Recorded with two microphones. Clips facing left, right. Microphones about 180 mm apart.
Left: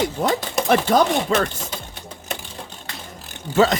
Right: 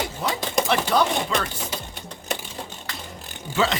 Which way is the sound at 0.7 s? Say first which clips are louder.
Left 6 dB; 45° left (ahead or behind).